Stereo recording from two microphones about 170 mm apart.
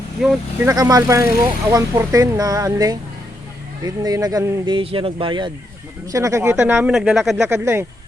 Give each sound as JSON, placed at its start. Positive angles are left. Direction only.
{"t": 0.2, "sound": "speech", "side_deg": 0}
{"t": 0.6, "sound": "speech", "side_deg": -20}
{"t": 6.1, "sound": "speech", "side_deg": -20}
{"t": 7.4, "sound": "speech", "side_deg": -15}